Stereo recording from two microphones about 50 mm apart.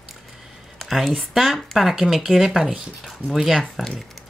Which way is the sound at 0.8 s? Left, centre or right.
Centre.